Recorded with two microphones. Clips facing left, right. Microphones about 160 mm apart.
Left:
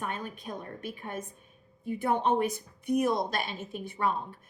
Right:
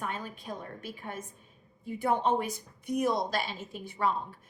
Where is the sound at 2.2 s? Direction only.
55° left (ahead or behind).